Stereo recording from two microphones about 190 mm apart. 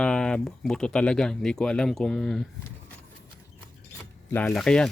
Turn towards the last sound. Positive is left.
turn(degrees=5)  # may be behind; listen again after turning